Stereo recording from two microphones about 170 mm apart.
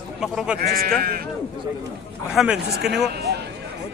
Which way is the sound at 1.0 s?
60° right (ahead or behind).